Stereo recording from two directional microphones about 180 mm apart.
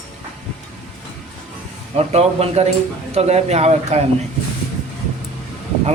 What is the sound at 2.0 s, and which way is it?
Speech, 35° right (ahead or behind).